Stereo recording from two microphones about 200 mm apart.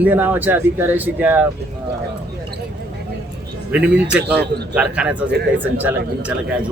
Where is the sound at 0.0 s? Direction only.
10° right (ahead or behind).